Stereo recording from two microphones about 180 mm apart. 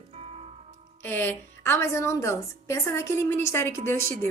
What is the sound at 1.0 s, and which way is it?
A woman's voice, 10° left (ahead or behind).